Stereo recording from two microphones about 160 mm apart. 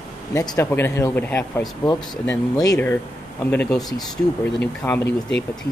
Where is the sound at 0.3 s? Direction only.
20° left (ahead or behind).